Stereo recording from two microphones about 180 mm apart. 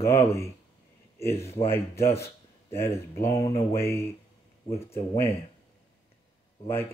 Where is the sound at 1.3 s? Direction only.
35° left (ahead or behind).